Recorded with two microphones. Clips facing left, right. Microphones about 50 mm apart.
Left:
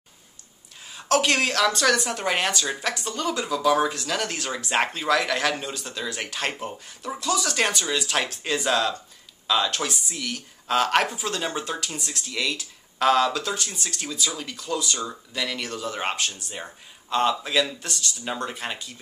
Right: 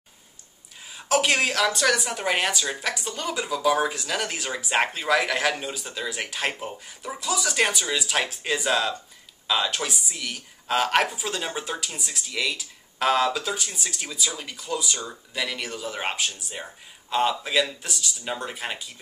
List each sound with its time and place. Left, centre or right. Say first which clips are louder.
0.8 s speech: left 1 dB; centre